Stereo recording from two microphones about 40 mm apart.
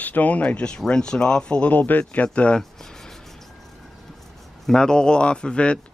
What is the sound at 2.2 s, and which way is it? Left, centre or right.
Speech, left.